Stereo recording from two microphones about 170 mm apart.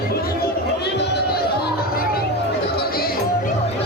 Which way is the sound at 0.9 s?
80° left.